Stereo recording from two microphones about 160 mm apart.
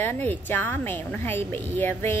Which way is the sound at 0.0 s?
10° left (ahead or behind).